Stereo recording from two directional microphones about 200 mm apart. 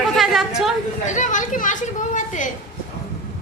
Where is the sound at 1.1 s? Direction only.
40° left (ahead or behind).